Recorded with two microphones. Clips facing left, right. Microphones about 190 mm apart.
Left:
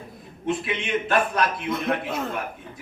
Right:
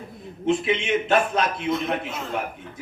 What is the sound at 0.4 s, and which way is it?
A man's voice, 25° right (ahead or behind).